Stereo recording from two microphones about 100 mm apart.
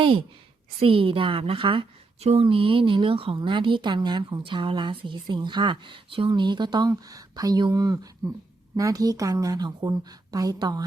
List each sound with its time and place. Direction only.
0.0 s a woman's voice: 60° right (ahead or behind)
2.2 s a woman's voice: 75° right (ahead or behind)
3.3 s a woman's voice: 55° right (ahead or behind)